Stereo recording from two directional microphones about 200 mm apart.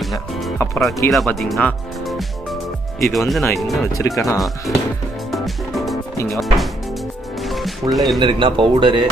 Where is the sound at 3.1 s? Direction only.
Centre (ahead or behind).